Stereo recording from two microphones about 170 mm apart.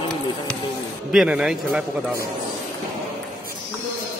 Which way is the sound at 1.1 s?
5° right (ahead or behind).